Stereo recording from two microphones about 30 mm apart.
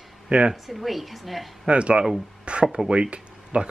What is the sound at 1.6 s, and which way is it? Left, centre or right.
Speech, right.